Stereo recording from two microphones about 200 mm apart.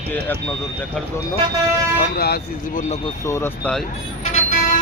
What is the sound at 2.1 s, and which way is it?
Speech, 50° left (ahead or behind).